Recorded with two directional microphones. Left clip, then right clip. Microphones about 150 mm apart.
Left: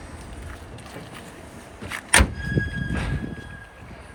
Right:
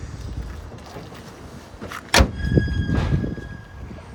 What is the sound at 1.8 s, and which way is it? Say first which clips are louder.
Vehicle: left 1 dB; 90° right.